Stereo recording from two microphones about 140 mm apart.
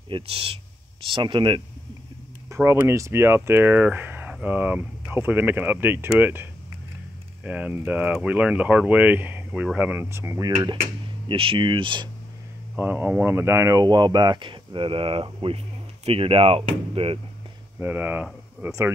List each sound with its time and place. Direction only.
0.1 s speech: 40° right (ahead or behind)
2.5 s speech: 20° right (ahead or behind)
11.2 s speech: 40° right (ahead or behind)
12.7 s speech: 15° right (ahead or behind); by 17.2 s 40° right (ahead or behind)
17.7 s speech: 15° right (ahead or behind)